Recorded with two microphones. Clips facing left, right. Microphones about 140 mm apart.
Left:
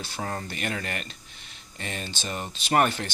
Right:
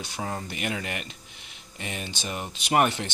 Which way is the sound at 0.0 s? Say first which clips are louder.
Even; 15° right (ahead or behind).